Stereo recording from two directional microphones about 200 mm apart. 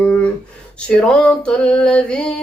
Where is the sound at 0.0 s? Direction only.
5° left (ahead or behind).